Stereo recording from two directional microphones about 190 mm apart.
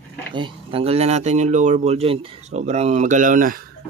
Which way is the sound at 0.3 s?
25° right (ahead or behind).